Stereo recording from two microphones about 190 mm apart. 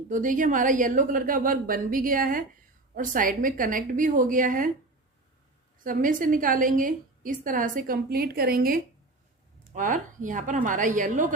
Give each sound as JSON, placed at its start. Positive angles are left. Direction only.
{"t": 0.1, "sound": "a woman's voice", "side_deg": -45}
{"t": 5.8, "sound": "a woman's voice", "side_deg": -45}